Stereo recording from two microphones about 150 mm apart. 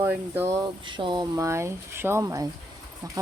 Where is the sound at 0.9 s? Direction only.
30° right (ahead or behind).